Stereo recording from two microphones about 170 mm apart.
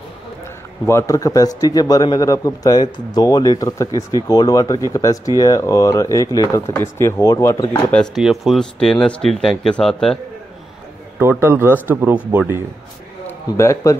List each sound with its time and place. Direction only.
0.8 s a man's voice: 15° left (ahead or behind)
7.9 s speech: centre (ahead or behind)
11.1 s speech: 15° right (ahead or behind)
13.6 s a man's voice: 15° left (ahead or behind)